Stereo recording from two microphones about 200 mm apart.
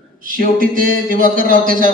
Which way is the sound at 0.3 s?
45° right (ahead or behind).